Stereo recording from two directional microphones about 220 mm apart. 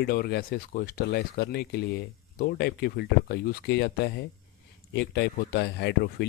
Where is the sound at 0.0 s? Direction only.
45° left (ahead or behind).